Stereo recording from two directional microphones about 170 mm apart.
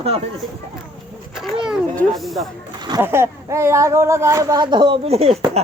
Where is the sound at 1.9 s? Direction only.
5° left (ahead or behind).